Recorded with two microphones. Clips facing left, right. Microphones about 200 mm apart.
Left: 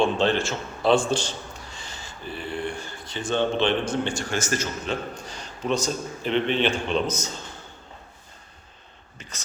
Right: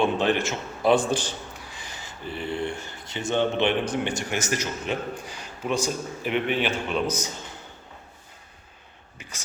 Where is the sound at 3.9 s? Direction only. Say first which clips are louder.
Left 1 dB; 20° right (ahead or behind).